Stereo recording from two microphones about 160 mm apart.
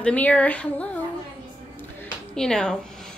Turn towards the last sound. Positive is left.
turn(degrees=5)  # may be behind; listen again after turning